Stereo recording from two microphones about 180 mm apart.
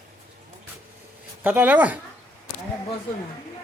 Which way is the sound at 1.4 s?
10° right (ahead or behind).